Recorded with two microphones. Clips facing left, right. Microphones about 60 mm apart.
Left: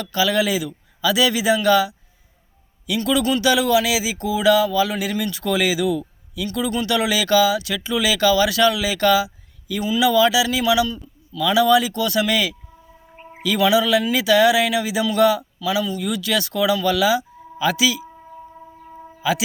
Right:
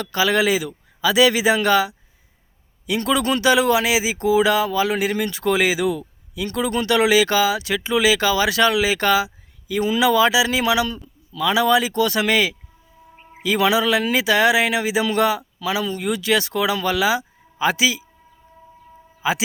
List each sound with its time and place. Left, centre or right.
0.0 s speech: right
3.0 s speech: right
11.3 s speech: right
19.2 s speech: right